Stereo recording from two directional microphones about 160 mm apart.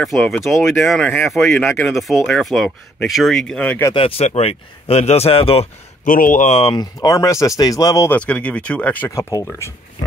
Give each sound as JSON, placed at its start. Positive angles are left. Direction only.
{"t": 0.0, "sound": "speech", "side_deg": 0}
{"t": 3.9, "sound": "speech", "side_deg": 35}
{"t": 6.0, "sound": "speech", "side_deg": 55}
{"t": 6.7, "sound": "speech", "side_deg": 25}
{"t": 8.1, "sound": "speech", "side_deg": 10}